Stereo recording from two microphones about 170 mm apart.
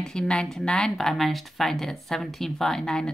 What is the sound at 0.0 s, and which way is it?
Speech, 5° left (ahead or behind).